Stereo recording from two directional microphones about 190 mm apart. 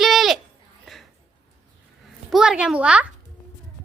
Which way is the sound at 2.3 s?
5° right (ahead or behind).